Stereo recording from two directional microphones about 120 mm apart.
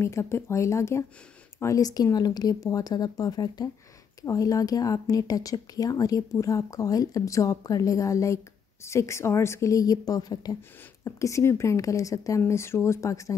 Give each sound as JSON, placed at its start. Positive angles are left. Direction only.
{"t": 0.0, "sound": "speech", "side_deg": 20}